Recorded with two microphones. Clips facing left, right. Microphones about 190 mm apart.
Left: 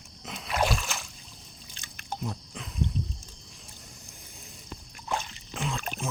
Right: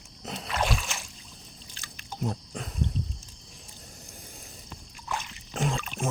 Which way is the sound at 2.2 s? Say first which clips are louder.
Right 7 dB; 40° right (ahead or behind).